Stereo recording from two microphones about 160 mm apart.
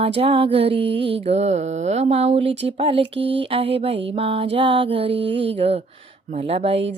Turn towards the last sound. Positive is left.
turn(degrees=-40)  # may be behind; listen again after turning